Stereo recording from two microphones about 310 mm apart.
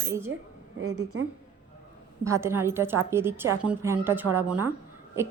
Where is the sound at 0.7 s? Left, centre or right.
Right.